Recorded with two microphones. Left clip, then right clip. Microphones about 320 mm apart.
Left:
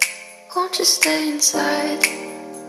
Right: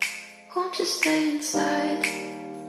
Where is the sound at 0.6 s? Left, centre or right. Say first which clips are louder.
Left 7 dB; left.